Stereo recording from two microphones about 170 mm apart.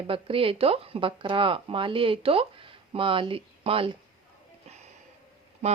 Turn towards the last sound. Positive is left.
turn(degrees=-45)  # may be behind; listen again after turning